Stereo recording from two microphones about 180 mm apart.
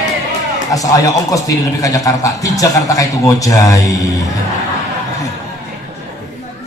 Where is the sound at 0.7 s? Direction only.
20° left (ahead or behind).